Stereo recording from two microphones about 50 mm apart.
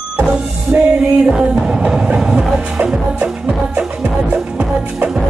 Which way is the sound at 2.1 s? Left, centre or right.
Centre.